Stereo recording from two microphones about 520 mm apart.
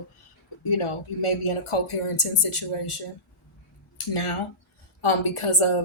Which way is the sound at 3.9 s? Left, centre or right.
Left.